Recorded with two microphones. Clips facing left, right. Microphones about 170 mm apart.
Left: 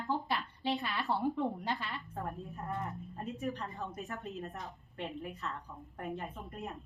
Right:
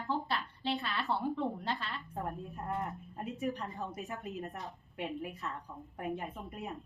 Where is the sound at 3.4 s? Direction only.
10° right (ahead or behind).